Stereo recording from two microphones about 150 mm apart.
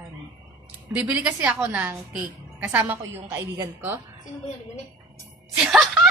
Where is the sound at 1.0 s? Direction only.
10° right (ahead or behind).